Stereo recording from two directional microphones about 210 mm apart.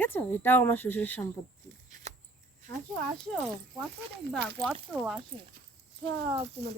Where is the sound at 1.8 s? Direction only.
35° right (ahead or behind).